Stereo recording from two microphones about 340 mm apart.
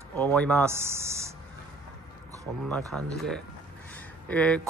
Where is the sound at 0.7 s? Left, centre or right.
Centre.